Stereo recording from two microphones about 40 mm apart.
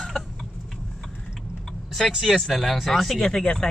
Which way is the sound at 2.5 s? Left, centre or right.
Centre.